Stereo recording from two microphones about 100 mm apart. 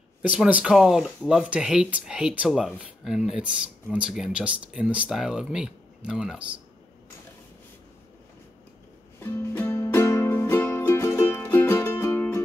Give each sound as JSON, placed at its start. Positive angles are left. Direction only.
{"t": 0.2, "sound": "speech", "side_deg": -10}
{"t": 9.2, "sound": "music", "side_deg": 20}